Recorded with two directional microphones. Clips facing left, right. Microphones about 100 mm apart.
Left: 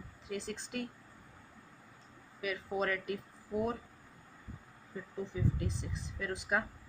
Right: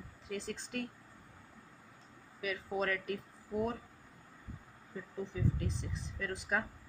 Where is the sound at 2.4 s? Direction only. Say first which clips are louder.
Left 1 dB; centre (ahead or behind).